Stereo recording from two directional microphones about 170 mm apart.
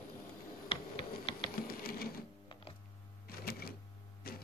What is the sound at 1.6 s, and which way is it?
Printer, 60° left (ahead or behind).